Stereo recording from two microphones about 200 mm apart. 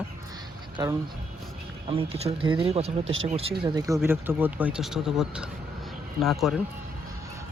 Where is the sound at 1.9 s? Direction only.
30° right (ahead or behind).